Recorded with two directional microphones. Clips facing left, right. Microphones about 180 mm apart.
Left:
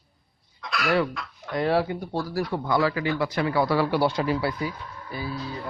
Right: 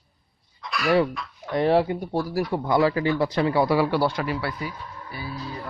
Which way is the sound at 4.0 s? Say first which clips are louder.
Left 1 dB; 20° left (ahead or behind).